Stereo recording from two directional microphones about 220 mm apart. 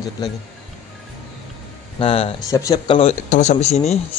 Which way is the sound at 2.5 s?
15° left (ahead or behind).